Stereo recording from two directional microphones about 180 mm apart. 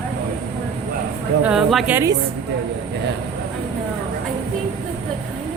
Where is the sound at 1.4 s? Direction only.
5° right (ahead or behind).